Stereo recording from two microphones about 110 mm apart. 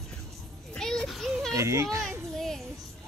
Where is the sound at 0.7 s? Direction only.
5° left (ahead or behind).